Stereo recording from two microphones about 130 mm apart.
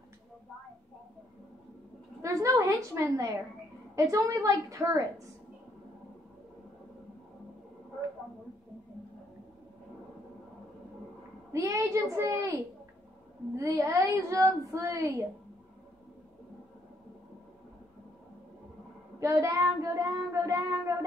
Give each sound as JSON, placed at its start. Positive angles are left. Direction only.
{"t": 2.2, "sound": "child singing", "side_deg": -25}
{"t": 11.5, "sound": "child singing", "side_deg": -25}
{"t": 19.1, "sound": "child singing", "side_deg": -25}